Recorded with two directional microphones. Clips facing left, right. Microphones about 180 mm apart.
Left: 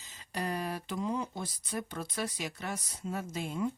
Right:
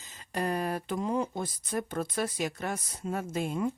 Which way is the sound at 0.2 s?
50° right (ahead or behind).